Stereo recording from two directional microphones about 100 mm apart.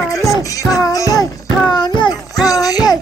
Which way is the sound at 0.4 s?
35° left (ahead or behind).